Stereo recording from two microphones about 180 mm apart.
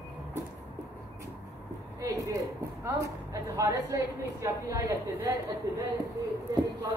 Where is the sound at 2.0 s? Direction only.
20° right (ahead or behind).